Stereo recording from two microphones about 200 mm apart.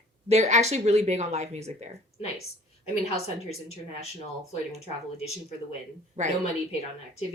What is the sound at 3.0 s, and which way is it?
Speech, 30° left (ahead or behind).